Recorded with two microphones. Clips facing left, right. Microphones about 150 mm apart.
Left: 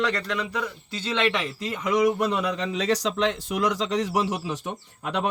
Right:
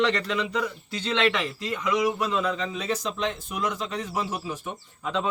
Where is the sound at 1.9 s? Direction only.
65° left (ahead or behind).